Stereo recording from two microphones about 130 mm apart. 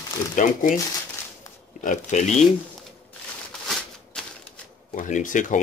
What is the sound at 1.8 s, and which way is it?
Speech, 70° left (ahead or behind).